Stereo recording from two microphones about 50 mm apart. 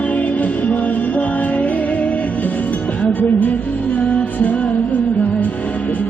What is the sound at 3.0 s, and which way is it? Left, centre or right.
Music, left.